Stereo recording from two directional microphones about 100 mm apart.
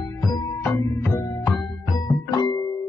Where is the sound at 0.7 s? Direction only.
20° left (ahead or behind).